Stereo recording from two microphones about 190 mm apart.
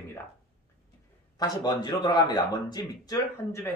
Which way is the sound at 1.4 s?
20° left (ahead or behind).